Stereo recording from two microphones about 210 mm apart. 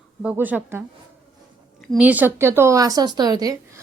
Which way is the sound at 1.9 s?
5° right (ahead or behind).